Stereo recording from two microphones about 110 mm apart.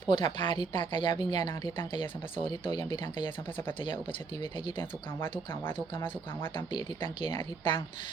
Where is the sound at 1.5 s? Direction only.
20° left (ahead or behind).